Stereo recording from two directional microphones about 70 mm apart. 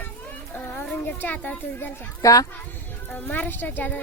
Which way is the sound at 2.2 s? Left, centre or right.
Left.